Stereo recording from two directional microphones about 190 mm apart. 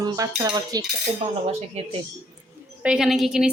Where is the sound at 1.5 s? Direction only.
30° right (ahead or behind).